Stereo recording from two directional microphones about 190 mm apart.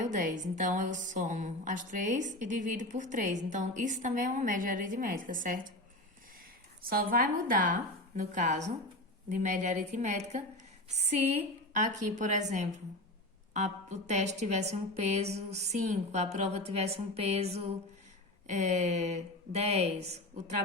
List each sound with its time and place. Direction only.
0.0 s a woman's voice: 40° right (ahead or behind)
6.8 s a woman's voice: 50° right (ahead or behind); by 17.5 s 35° right (ahead or behind)
18.5 s a woman's voice: 40° right (ahead or behind)